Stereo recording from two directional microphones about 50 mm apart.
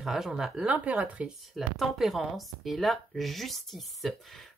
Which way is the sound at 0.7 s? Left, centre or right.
Right.